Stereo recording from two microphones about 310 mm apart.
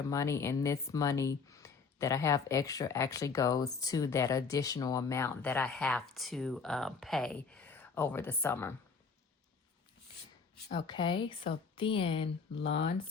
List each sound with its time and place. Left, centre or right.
0.1 s speech: centre
10.7 s speech: centre